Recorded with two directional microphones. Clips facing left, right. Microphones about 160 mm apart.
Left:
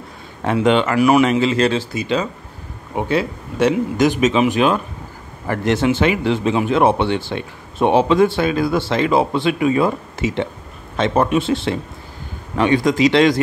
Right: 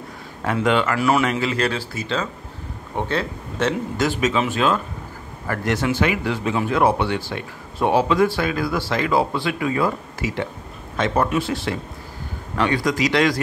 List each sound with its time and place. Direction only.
0.4 s speech: 20° left (ahead or behind)